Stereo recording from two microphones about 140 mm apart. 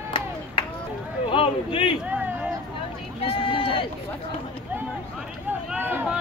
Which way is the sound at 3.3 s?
40° left (ahead or behind).